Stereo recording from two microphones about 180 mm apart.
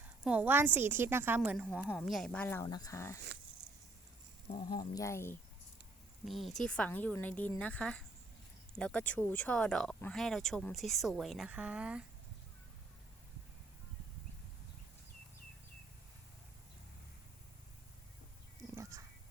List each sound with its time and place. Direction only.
0.0 s a woman's voice: 10° right (ahead or behind)
1.4 s a woman's voice: centre (ahead or behind); by 3.2 s 15° left (ahead or behind)
4.7 s a woman's voice: 20° left (ahead or behind)
6.2 s a woman's voice: centre (ahead or behind)
18.8 s music: 20° right (ahead or behind)